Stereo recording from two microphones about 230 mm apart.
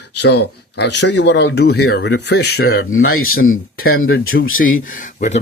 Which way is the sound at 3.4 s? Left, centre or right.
Left.